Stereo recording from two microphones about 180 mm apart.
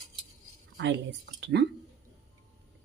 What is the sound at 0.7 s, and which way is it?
Speech, 85° right.